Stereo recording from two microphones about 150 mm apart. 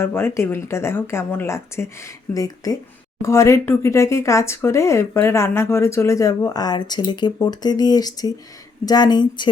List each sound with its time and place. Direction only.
0.0 s speech: 15° left (ahead or behind)